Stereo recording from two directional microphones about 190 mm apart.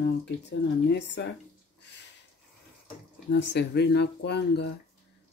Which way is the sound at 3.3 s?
65° left (ahead or behind).